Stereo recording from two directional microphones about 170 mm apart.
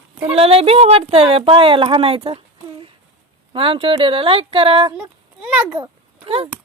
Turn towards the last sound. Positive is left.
turn(degrees=-35)  # may be behind; listen again after turning